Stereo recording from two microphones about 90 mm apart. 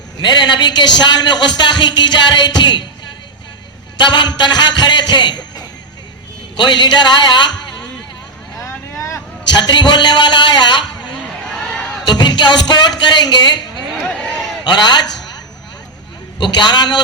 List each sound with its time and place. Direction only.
0.2 s a man's voice: 55° left (ahead or behind)
3.9 s a man's voice: 55° left (ahead or behind)
8.6 s vehicle: 35° left (ahead or behind)
9.6 s a man's voice: 55° left (ahead or behind)
11.1 s a sound: 10° left (ahead or behind)
12.0 s speech: 55° left (ahead or behind)
14.2 s a sound: 10° left (ahead or behind)
14.6 s a man's voice: 55° left (ahead or behind)
16.4 s a man's voice: 55° left (ahead or behind)